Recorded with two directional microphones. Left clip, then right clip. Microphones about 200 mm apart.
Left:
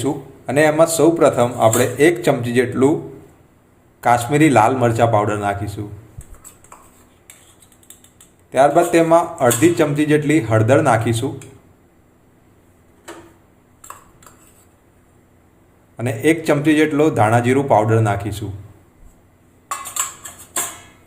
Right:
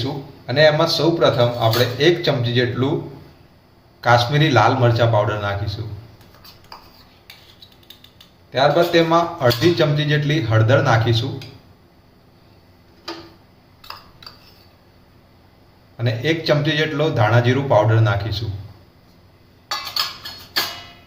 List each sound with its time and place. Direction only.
0.0 s a man's voice: 40° left (ahead or behind)
4.1 s a man's voice: 35° left (ahead or behind)
8.5 s a man's voice: 40° left (ahead or behind)
16.0 s a man's voice: 40° left (ahead or behind)